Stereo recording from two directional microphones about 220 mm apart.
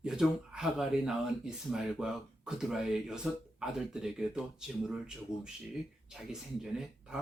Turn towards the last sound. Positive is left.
turn(degrees=0)  # may be behind; listen again after turning